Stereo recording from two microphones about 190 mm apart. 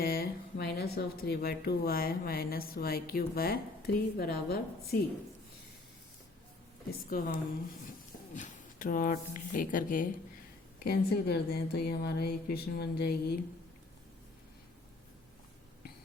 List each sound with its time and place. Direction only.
0.0 s speech: 50° left (ahead or behind)
7.1 s speech: 45° left (ahead or behind)
10.8 s speech: 55° left (ahead or behind)